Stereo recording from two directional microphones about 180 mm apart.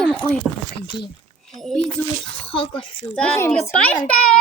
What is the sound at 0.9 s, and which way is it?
Speech, 25° left (ahead or behind).